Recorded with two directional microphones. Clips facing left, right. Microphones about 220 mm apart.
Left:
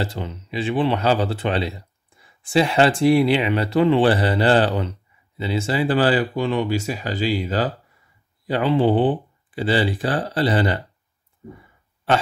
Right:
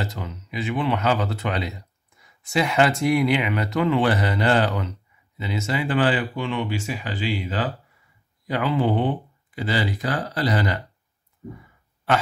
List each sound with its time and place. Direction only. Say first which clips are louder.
0.0 s speech: left 4 dB; 30° left (ahead or behind)
8.5 s speech: left 4 dB; 30° left (ahead or behind)